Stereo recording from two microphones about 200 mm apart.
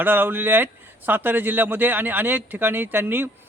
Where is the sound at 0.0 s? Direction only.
10° right (ahead or behind).